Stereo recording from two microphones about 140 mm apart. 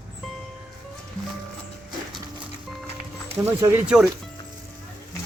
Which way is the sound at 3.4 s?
15° right (ahead or behind).